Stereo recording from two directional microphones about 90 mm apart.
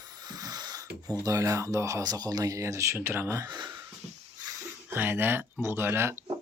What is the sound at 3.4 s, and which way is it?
Speech, 55° right (ahead or behind).